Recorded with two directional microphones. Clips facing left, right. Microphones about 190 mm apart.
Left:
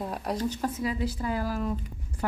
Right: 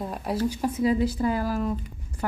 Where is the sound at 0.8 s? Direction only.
35° right (ahead or behind).